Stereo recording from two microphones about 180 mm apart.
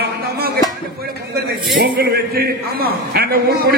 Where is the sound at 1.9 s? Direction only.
60° right (ahead or behind).